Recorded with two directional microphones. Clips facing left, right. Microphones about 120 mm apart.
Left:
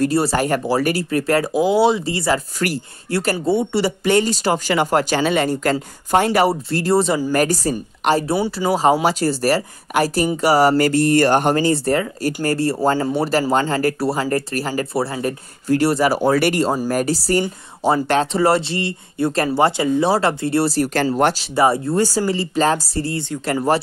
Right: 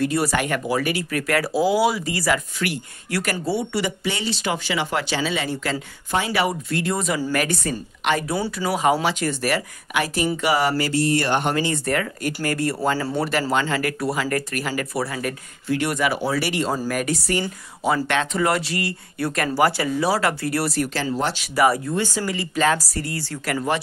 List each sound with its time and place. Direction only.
0.0 s speech: 30° left (ahead or behind)
4.0 s speech: 50° left (ahead or behind)
6.5 s speech: 35° left (ahead or behind)
10.8 s speech: 50° left (ahead or behind)
16.9 s speech: 35° left (ahead or behind)
20.9 s speech: 55° left (ahead or behind)
21.5 s speech: 25° left (ahead or behind)